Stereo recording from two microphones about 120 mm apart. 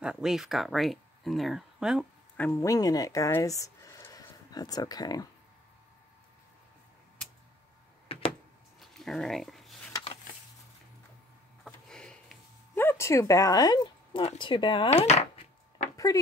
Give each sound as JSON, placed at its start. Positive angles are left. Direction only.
{"t": 0.0, "sound": "speech", "side_deg": -5}
{"t": 2.3, "sound": "speech", "side_deg": 15}
{"t": 2.6, "sound": "speech", "side_deg": 30}
{"t": 8.8, "sound": "a sound", "side_deg": 5}
{"t": 11.6, "sound": "a sound", "side_deg": 5}
{"t": 12.7, "sound": "speech", "side_deg": 20}
{"t": 14.2, "sound": "speech", "side_deg": 45}
{"t": 14.9, "sound": "chopping", "side_deg": 65}